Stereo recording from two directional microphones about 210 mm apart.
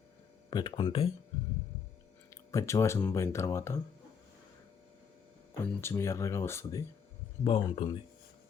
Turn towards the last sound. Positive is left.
turn(degrees=25)  # may be behind; listen again after turning